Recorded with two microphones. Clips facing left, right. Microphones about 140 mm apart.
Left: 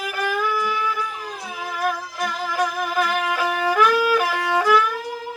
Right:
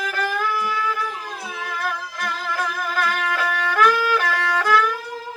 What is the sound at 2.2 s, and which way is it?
Music, 15° left (ahead or behind).